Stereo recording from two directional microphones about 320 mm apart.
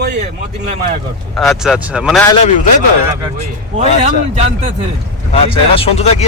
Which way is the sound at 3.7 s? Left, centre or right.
Right.